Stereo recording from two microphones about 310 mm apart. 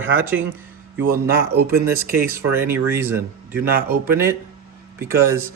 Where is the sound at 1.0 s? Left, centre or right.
Right.